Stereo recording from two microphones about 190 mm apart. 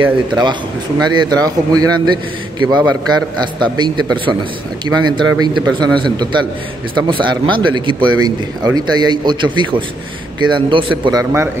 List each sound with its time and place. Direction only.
0.0 s speech: 25° right (ahead or behind)